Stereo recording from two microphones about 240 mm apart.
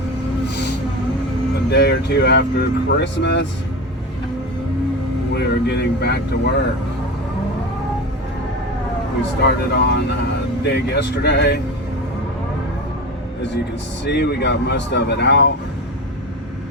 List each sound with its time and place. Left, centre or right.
1.7 s speech: left
5.3 s speech: left
9.4 s speech: left
14.0 s speech: left